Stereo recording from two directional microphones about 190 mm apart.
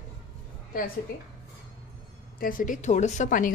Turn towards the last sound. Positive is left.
turn(degrees=45)  # may be behind; listen again after turning